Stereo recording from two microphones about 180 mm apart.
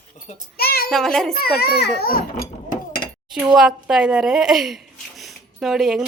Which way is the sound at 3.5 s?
Centre (ahead or behind).